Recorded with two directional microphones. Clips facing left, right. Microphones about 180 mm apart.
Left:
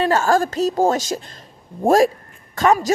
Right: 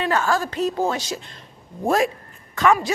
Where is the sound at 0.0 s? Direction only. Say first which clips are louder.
Left 5 dB; 40° left (ahead or behind).